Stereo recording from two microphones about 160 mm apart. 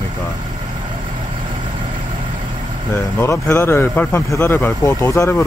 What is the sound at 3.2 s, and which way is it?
Speech, 15° left (ahead or behind).